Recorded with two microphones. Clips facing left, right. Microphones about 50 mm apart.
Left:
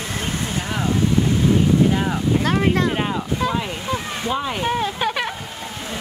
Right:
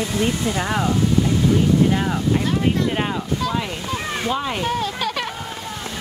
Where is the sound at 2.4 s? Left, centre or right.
Left.